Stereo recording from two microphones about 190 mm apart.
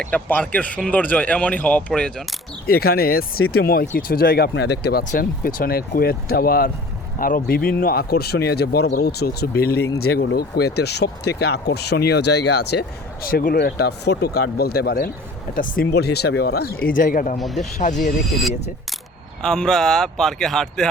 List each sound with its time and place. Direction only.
0.0 s speech: 10° left (ahead or behind)
2.6 s speech: 55° left (ahead or behind)
13.2 s speech: 50° left (ahead or behind)
17.3 s speech: centre (ahead or behind)
17.7 s speech: 40° left (ahead or behind)
19.4 s speech: 5° left (ahead or behind)